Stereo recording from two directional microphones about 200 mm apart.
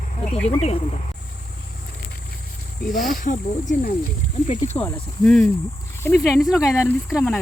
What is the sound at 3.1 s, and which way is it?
Speech, 40° left (ahead or behind).